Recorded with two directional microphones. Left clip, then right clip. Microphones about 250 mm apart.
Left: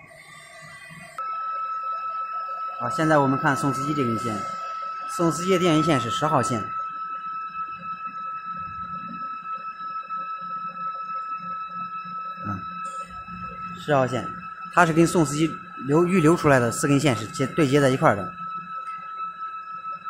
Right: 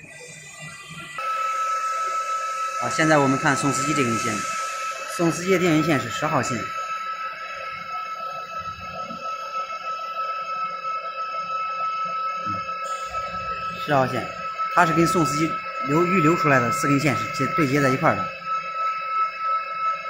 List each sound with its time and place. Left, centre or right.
2.9 s speech: left
5.1 s speech: left
13.8 s speech: left